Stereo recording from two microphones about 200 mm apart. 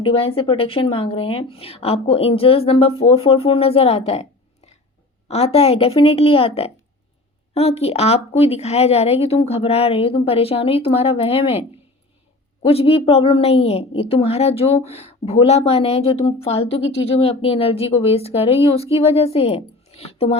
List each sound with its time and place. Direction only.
0.0 s a woman's voice: 25° left (ahead or behind)
12.6 s a woman's voice: 30° left (ahead or behind)
16.8 s speech: 65° left (ahead or behind)
17.2 s a woman's voice: 30° left (ahead or behind)